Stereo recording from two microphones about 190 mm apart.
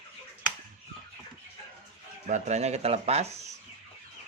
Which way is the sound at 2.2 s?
40° right (ahead or behind).